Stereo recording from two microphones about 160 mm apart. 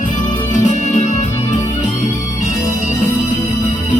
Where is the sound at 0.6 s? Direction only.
50° left (ahead or behind).